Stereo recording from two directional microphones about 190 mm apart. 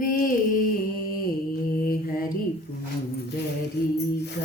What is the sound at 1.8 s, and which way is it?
Mantra, 50° left (ahead or behind).